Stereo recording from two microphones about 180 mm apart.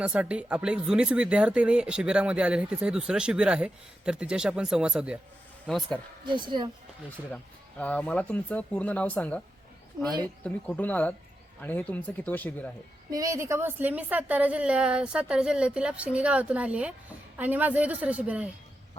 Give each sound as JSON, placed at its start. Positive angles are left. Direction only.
{"t": 0.0, "sound": "speech", "side_deg": -5}
{"t": 6.2, "sound": "speech", "side_deg": -25}
{"t": 7.8, "sound": "speech", "side_deg": 5}
{"t": 10.4, "sound": "speech", "side_deg": 10}
{"t": 13.1, "sound": "a woman's voice", "side_deg": -20}